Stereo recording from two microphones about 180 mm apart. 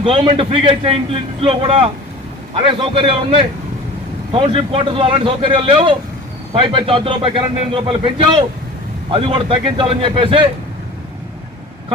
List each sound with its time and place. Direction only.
0.0 s a man's voice: 30° right (ahead or behind)